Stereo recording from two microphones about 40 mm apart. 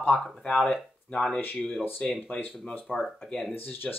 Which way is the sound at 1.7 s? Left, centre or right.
Left.